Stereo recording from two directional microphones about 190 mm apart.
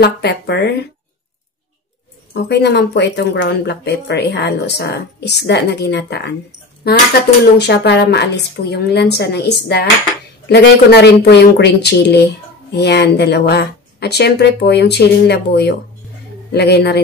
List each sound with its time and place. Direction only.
0.0 s speech: 60° left (ahead or behind)
2.3 s speech: 60° left (ahead or behind)
7.5 s speech: 60° left (ahead or behind)